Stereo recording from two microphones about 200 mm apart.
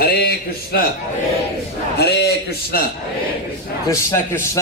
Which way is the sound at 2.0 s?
55° left (ahead or behind).